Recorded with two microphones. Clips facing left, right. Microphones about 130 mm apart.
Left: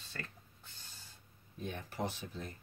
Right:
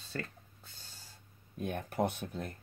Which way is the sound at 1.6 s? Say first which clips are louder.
Right 6 dB; 55° right (ahead or behind).